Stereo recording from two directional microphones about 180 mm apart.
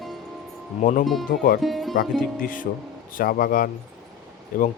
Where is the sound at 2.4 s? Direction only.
50° left (ahead or behind).